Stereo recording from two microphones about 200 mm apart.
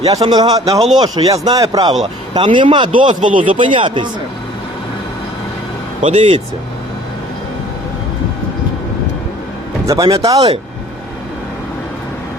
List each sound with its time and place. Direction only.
0.2 s speech: 20° right (ahead or behind)
3.2 s speech: 40° right (ahead or behind)
3.5 s speech: 25° right (ahead or behind)
6.0 s speech: 30° right (ahead or behind)
9.8 s speech: 15° right (ahead or behind)